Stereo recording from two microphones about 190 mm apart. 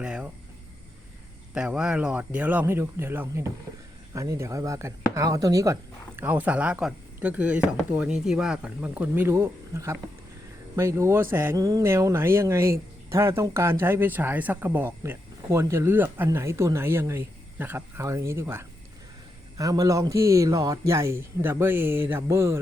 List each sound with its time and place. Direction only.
0.0 s speech: 5° right (ahead or behind)
1.5 s speech: 5° right (ahead or behind)